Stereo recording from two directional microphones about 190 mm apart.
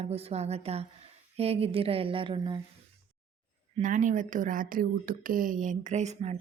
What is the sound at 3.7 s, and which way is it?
A woman's voice, 40° right (ahead or behind).